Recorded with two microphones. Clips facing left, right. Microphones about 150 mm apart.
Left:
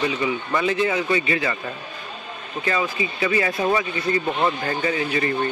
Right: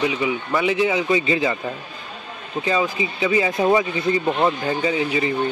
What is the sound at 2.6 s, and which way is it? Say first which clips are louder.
A man's voice: right 2 dB; 15° right (ahead or behind).